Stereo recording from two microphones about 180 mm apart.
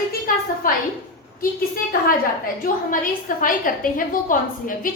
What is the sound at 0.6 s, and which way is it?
Speech, 50° left (ahead or behind).